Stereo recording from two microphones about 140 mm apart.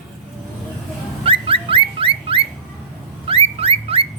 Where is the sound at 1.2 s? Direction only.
40° right (ahead or behind).